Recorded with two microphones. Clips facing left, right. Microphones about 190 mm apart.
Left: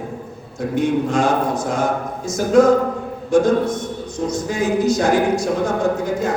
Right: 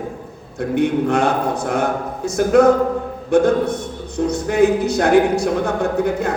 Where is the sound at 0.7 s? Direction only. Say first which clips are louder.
Right 2 dB; 60° right (ahead or behind).